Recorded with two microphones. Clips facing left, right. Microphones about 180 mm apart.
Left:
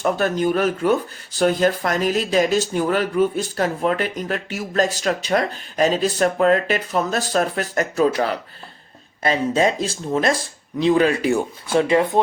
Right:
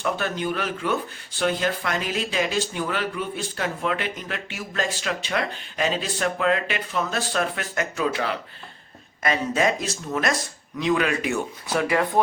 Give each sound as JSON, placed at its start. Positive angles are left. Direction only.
{"t": 0.0, "sound": "speech", "side_deg": 40}
{"t": 9.2, "sound": "speech", "side_deg": 30}